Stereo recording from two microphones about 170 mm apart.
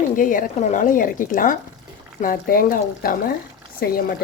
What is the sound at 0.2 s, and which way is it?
Speech, 55° left (ahead or behind).